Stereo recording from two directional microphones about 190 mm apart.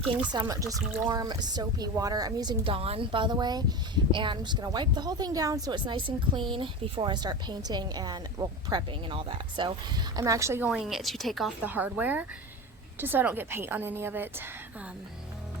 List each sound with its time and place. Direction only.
0.3 s a woman's voice: 20° right (ahead or behind)